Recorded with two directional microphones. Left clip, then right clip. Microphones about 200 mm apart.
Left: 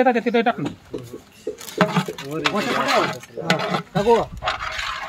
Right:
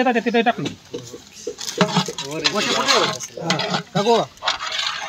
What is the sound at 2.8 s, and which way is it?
Speech, 5° left (ahead or behind).